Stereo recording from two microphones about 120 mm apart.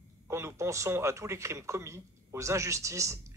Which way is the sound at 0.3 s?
25° right (ahead or behind).